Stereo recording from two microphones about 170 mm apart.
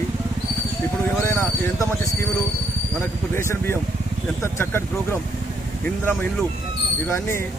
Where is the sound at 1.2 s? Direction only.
15° left (ahead or behind).